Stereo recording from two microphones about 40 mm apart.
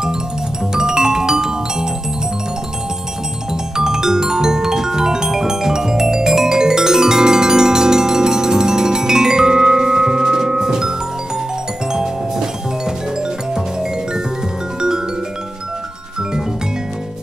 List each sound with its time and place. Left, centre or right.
0.7 s music: centre
3.7 s music: centre